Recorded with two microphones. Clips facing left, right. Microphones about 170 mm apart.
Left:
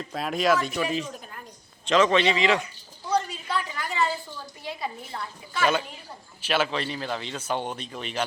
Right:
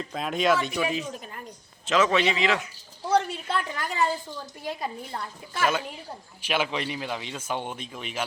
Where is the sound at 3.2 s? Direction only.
65° right (ahead or behind).